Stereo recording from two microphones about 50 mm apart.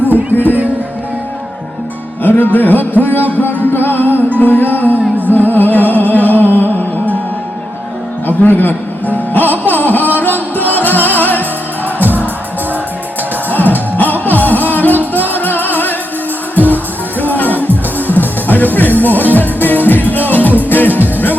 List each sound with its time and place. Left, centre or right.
0.1 s music: right
2.2 s speech: left
3.3 s music: left
8.3 s music: left
12.0 s music: right
13.5 s music: left